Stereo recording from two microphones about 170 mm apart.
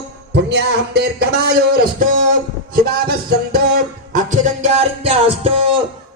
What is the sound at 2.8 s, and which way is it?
Music, 65° right (ahead or behind).